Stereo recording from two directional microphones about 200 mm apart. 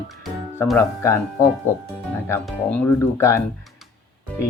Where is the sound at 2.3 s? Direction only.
10° left (ahead or behind).